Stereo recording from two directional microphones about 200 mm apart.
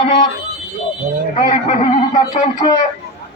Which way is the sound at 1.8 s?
20° left (ahead or behind).